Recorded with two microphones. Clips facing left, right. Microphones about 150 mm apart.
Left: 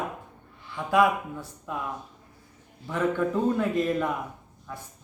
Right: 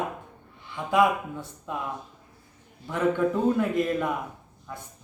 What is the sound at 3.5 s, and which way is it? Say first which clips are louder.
Speech: even; 10° right (ahead or behind).